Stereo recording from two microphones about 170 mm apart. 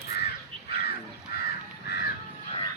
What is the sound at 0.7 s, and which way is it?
Crow, 70° left (ahead or behind).